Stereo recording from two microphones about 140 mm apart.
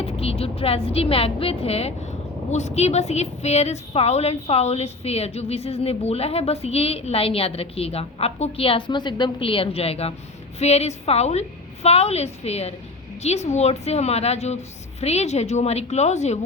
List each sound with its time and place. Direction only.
0.0 s a woman's voice: 45° left (ahead or behind)